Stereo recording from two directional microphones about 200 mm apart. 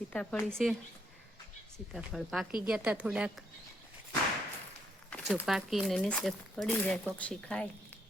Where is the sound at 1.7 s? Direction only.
Centre (ahead or behind).